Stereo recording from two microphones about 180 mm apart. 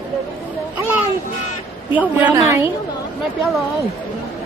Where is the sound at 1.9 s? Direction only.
10° right (ahead or behind).